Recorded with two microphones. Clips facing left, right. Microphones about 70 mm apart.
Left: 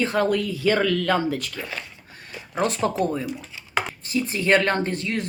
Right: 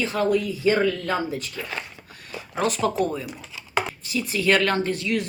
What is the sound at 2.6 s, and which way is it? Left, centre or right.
Speech, left.